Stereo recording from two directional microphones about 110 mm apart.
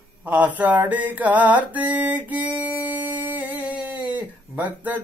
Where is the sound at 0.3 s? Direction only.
15° right (ahead or behind).